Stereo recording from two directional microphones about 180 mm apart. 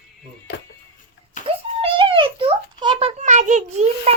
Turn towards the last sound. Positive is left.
turn(degrees=-35)  # may be behind; listen again after turning